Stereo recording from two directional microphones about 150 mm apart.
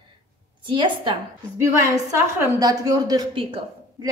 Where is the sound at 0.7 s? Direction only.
35° right (ahead or behind).